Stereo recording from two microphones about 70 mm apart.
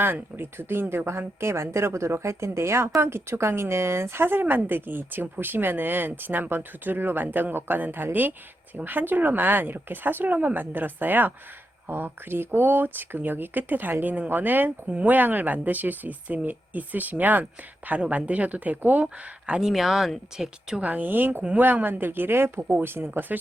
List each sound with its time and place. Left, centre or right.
0.0 s speech: right
19.0 s speech: centre
20.8 s speech: right